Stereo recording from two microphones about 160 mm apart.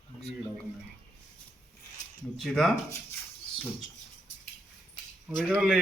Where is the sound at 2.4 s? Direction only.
Centre (ahead or behind).